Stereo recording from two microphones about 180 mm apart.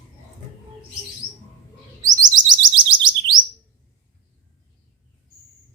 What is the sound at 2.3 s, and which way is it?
Chirp, 25° right (ahead or behind).